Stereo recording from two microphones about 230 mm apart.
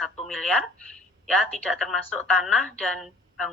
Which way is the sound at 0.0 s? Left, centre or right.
Centre.